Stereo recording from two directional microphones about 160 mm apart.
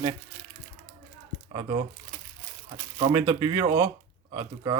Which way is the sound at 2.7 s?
25° right (ahead or behind).